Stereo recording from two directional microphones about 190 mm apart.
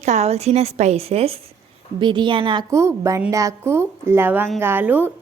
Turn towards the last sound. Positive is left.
turn(degrees=-10)  # may be behind; listen again after turning